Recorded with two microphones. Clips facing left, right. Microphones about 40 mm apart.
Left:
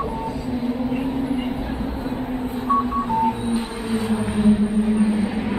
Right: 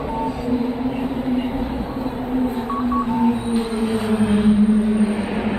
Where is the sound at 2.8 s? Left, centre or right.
Centre.